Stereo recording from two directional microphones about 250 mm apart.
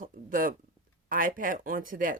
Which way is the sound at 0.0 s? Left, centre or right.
Right.